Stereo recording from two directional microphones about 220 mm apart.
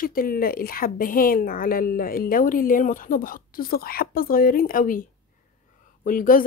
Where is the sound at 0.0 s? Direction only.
40° left (ahead or behind).